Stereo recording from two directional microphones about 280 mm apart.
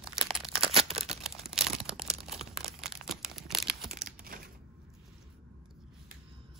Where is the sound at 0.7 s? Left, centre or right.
Right.